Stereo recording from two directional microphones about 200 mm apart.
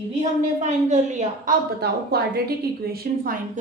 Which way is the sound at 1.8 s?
50° right (ahead or behind).